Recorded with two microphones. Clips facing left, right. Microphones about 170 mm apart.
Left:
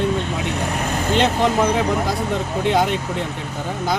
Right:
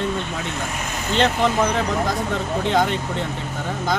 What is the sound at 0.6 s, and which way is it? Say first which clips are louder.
Speech: left 5 dB; 60° left (ahead or behind).